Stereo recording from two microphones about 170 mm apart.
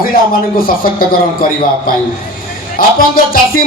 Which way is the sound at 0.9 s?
55° left (ahead or behind).